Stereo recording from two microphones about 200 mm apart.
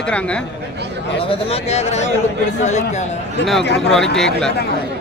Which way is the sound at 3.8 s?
Centre (ahead or behind).